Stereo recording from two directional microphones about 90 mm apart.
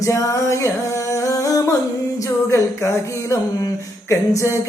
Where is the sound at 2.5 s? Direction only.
35° left (ahead or behind).